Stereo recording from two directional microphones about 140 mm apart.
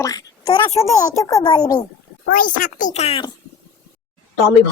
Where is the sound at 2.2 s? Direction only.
80° left; by 3.2 s 50° left (ahead or behind).